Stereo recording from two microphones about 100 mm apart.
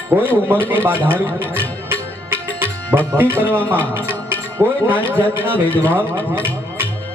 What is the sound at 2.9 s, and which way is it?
Music, 20° right (ahead or behind).